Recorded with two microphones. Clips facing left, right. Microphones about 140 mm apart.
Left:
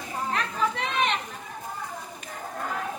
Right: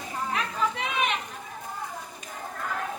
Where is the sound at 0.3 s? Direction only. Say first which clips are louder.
Left 1 dB; 5° right (ahead or behind).